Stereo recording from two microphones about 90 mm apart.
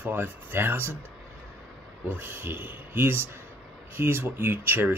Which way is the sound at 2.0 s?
20° right (ahead or behind).